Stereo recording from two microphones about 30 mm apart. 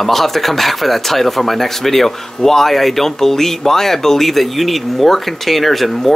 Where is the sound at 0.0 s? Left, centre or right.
Centre.